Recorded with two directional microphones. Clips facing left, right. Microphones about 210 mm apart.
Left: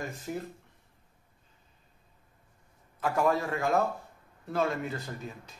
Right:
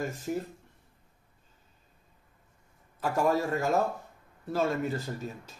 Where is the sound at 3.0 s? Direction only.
40° right (ahead or behind).